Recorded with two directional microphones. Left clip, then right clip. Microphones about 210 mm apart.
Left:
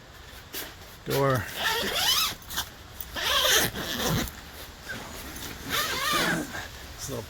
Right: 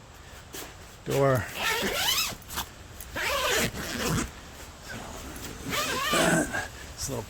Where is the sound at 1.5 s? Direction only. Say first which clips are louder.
Left 1 dB; 25° right (ahead or behind).